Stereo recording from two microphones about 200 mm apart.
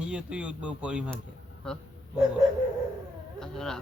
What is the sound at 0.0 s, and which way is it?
A man's voice, 5° right (ahead or behind).